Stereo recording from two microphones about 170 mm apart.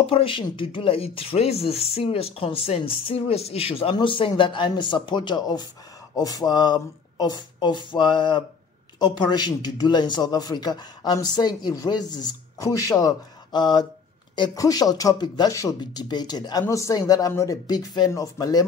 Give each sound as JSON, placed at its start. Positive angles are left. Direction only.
{"t": 0.0, "sound": "a man's voice", "side_deg": 30}